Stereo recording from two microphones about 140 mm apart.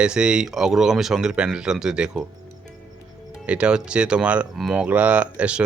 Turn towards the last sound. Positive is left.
turn(degrees=-10)  # may be behind; listen again after turning